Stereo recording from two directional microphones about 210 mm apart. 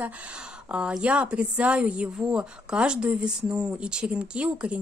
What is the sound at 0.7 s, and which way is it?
A woman's voice, 5° right (ahead or behind).